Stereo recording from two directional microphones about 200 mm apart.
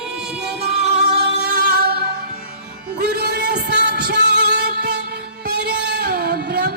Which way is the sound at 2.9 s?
50° right (ahead or behind).